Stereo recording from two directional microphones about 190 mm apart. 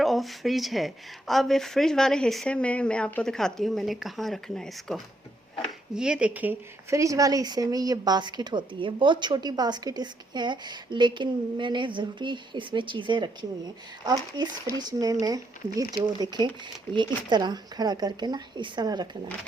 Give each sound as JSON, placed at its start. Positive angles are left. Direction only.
{"t": 0.0, "sound": "speech", "side_deg": 0}
{"t": 14.8, "sound": "speech", "side_deg": -20}